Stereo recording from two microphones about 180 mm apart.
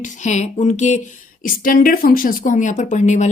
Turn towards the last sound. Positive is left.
turn(degrees=40)  # may be behind; listen again after turning